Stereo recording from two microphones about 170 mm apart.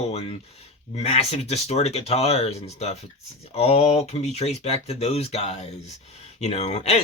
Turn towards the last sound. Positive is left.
turn(degrees=40)  # may be behind; listen again after turning